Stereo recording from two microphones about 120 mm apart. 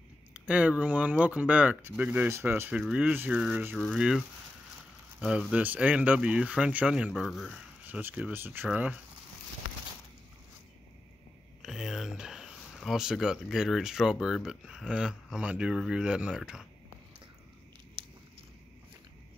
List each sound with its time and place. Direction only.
0.3 s speech: 10° right (ahead or behind)
3.7 s speech: 5° left (ahead or behind)
5.5 s speech: 10° right (ahead or behind)
7.1 s speech: centre (ahead or behind)
7.8 s speech: 15° right (ahead or behind)
11.6 s a sound: 5° right (ahead or behind)
14.2 s speech: 5° right (ahead or behind)
18.0 s a sound: 40° right (ahead or behind)